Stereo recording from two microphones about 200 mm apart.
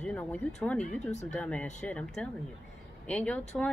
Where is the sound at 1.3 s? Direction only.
5° left (ahead or behind).